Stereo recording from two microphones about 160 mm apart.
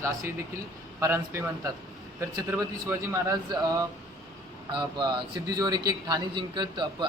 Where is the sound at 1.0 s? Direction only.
15° right (ahead or behind).